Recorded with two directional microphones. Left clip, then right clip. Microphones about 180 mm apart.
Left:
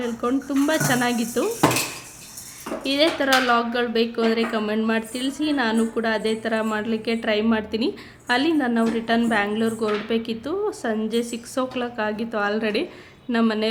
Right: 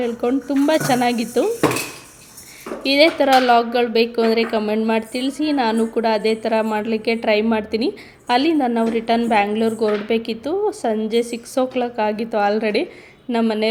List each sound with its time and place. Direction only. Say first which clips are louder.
0.0 s speech: right 4 dB; 15° right (ahead or behind)
2.8 s speech: right 6 dB; 20° right (ahead or behind)